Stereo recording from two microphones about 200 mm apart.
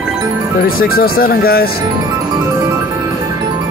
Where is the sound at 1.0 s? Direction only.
50° left (ahead or behind).